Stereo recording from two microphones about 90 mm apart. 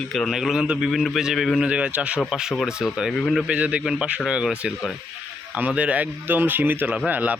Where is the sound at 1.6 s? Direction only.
10° right (ahead or behind); by 3.4 s 5° left (ahead or behind).